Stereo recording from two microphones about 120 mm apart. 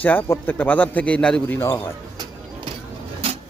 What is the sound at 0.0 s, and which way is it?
A man's voice, 15° left (ahead or behind).